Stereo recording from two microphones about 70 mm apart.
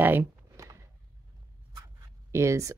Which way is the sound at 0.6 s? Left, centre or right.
Right.